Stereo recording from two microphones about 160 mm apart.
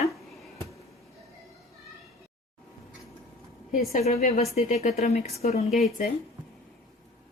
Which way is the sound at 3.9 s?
45° left (ahead or behind).